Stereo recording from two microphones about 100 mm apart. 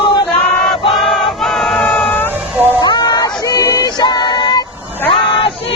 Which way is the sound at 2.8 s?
45° left (ahead or behind).